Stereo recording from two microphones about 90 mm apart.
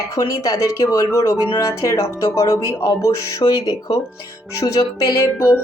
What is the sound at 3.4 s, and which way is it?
Speech, 50° left (ahead or behind).